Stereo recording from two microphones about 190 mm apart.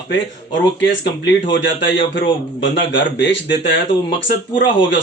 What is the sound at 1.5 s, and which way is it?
Speech, 70° left (ahead or behind).